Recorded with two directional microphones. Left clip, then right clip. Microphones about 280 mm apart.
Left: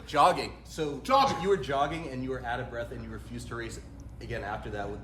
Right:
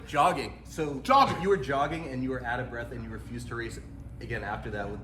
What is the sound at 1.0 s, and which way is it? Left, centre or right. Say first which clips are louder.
Speech: right 2 dB; centre.